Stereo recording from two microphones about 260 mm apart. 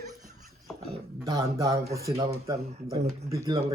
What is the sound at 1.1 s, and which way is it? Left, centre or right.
Speech, centre.